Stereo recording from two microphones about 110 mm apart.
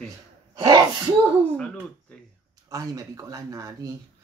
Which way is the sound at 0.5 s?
35° right (ahead or behind).